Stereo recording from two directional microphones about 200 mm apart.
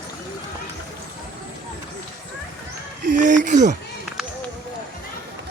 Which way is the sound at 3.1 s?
40° right (ahead or behind).